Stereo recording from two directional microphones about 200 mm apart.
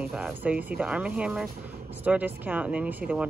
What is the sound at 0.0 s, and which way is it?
Speech, 5° right (ahead or behind).